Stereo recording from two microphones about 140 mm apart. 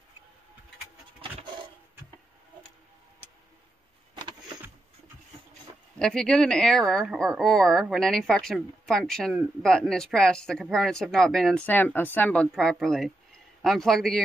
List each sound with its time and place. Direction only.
4.1 s vehicle: 35° right (ahead or behind)
5.9 s speech: 5° left (ahead or behind)